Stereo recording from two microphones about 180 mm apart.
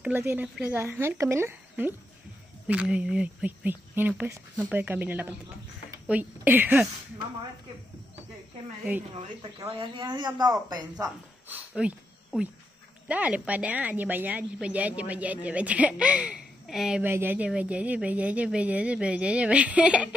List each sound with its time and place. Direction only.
0.0 s a woman's voice: 10° right (ahead or behind)
9.6 s speech: 20° right (ahead or behind)
11.4 s a sound: 10° right (ahead or behind)
13.1 s a woman's voice: 10° right (ahead or behind)